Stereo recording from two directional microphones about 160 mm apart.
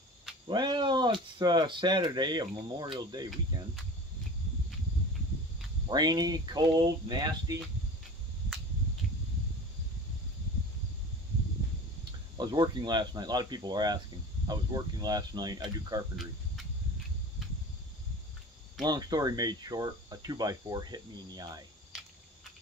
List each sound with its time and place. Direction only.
0.5 s speech: 30° right (ahead or behind)
5.9 s speech: 25° right (ahead or behind)
12.4 s speech: 25° right (ahead or behind)
18.8 s speech: 25° right (ahead or behind)